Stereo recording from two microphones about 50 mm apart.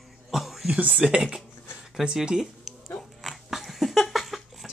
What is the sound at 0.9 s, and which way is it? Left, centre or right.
Speech, centre.